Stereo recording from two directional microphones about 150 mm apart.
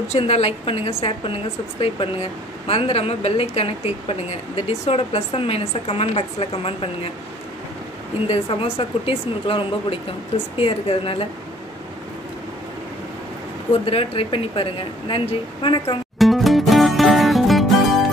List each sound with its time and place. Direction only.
0.1 s a woman's voice: 45° left (ahead or behind)
8.3 s a woman's voice: 40° left (ahead or behind)
13.8 s a woman's voice: 35° left (ahead or behind)
16.2 s music: centre (ahead or behind)